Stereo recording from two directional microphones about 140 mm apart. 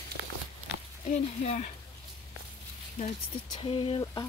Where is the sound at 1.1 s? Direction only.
60° left (ahead or behind).